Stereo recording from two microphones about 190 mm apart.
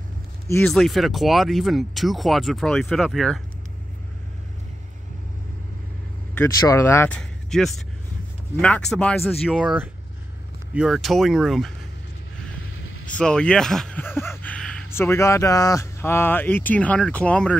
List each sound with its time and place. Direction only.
0.7 s speech: centre (ahead or behind)
6.3 s speech: 15° left (ahead or behind)
12.6 s vehicle: 90° left
13.0 s speech: 5° left (ahead or behind)